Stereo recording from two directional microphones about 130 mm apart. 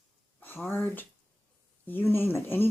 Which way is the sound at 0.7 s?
15° left (ahead or behind).